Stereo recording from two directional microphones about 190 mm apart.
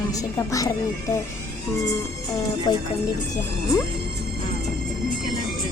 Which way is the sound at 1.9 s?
20° left (ahead or behind).